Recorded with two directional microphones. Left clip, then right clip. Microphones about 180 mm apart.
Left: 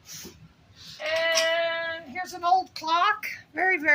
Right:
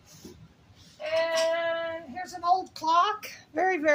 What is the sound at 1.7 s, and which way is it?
Child singing, 20° right (ahead or behind).